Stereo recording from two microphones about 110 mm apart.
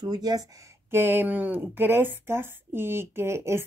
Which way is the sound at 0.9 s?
20° right (ahead or behind).